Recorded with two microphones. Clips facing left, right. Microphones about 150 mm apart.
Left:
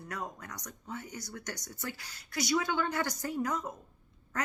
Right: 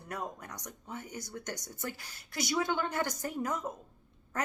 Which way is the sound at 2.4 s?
20° right (ahead or behind).